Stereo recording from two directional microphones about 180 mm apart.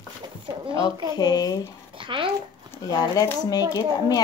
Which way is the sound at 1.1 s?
20° left (ahead or behind).